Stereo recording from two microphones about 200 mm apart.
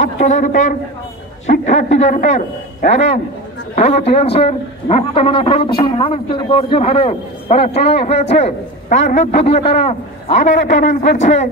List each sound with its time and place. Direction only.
0.0 s a man's voice: 35° left (ahead or behind)